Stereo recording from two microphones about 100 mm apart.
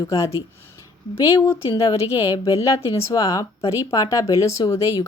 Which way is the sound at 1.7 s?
35° left (ahead or behind).